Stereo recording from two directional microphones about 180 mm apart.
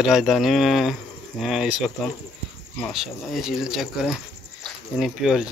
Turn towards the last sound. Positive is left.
turn(degrees=0)  # may be behind; listen again after turning